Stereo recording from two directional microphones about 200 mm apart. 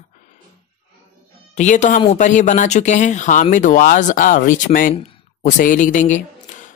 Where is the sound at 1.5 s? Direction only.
35° left (ahead or behind).